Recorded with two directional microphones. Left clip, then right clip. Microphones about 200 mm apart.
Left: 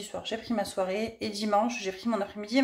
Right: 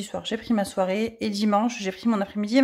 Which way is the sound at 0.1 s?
55° right (ahead or behind).